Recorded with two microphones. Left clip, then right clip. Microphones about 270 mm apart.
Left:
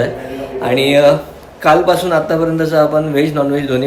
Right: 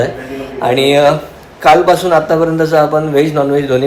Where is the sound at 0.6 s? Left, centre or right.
Centre.